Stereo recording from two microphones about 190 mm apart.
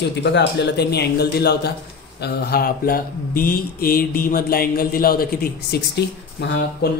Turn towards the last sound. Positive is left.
turn(degrees=60)  # may be behind; listen again after turning